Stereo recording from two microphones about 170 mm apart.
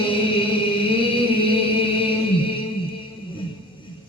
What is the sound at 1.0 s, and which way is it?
Music, 30° left (ahead or behind).